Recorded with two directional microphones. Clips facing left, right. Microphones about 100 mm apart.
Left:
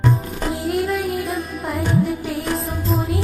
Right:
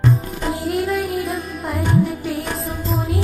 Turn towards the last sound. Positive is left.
turn(degrees=0)  # may be behind; listen again after turning